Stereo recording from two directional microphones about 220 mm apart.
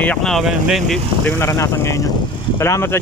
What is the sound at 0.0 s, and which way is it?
Speech, 5° left (ahead or behind).